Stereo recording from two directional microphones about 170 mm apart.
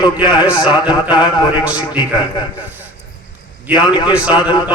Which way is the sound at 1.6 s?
5° right (ahead or behind).